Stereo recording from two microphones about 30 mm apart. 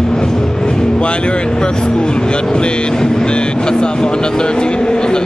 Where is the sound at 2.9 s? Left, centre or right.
Left.